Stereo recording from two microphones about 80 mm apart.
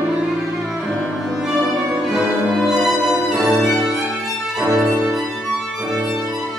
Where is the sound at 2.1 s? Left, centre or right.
Centre.